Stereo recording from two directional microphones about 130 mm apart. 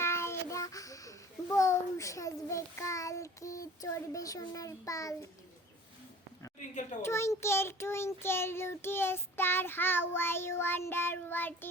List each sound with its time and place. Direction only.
0.0 s a child's voice: 20° left (ahead or behind)
7.0 s child singing: 20° left (ahead or behind)